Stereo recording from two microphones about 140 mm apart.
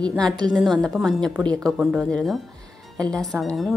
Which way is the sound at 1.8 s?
5° right (ahead or behind).